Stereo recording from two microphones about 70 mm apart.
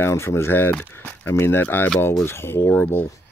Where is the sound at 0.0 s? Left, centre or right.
Left.